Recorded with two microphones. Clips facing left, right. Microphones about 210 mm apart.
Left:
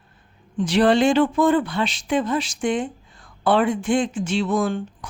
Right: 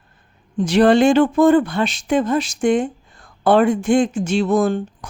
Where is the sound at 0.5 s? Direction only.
45° right (ahead or behind).